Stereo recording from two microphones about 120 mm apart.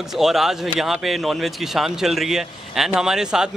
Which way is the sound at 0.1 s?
Centre (ahead or behind).